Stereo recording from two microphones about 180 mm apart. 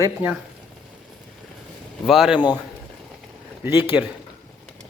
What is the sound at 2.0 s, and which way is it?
Speech, centre (ahead or behind).